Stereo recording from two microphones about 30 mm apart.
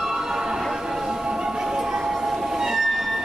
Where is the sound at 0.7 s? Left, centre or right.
Centre.